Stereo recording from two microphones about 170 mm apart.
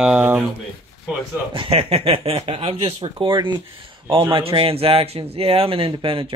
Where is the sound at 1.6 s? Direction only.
35° right (ahead or behind).